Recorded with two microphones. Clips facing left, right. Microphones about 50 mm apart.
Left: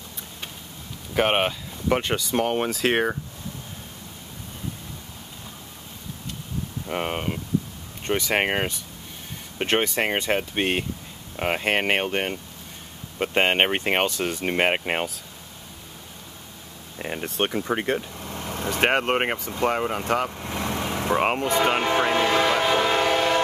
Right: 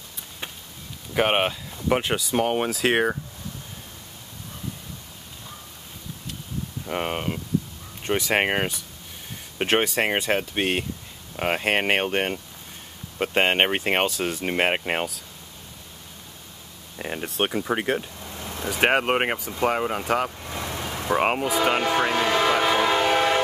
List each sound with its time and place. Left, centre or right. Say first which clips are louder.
1.1 s speech: even; centre
6.9 s speech: even; centre
17.0 s speech: even; centre
20.4 s vehicle: left 3 dB; left
21.1 s speech: even; centre
22.2 s music: even; centre
22.6 s train: even; centre